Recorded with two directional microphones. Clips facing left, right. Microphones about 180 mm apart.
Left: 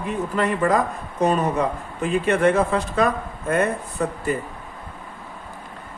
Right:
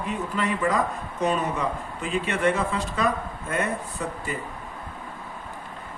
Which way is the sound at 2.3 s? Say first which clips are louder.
Left 6 dB; 50° left (ahead or behind).